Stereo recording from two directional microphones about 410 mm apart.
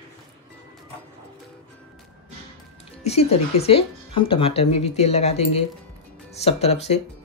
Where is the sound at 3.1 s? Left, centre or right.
Centre.